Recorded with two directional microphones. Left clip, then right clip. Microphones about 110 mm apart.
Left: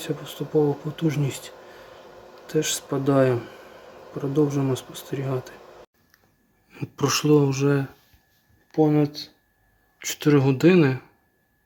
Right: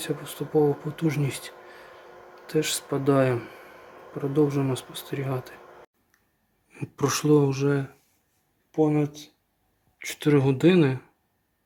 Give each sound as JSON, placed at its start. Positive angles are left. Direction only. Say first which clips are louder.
{"t": 0.0, "sound": "speech", "louder": "left 1 dB", "side_deg": 0}
{"t": 7.5, "sound": "speech", "louder": "left 3 dB", "side_deg": 15}
{"t": 8.7, "sound": "speech", "louder": "left 3 dB", "side_deg": 25}
{"t": 10.0, "sound": "speech", "louder": "left 2 dB", "side_deg": 5}